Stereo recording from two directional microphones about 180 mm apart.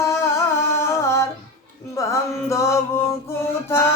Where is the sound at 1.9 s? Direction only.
15° left (ahead or behind).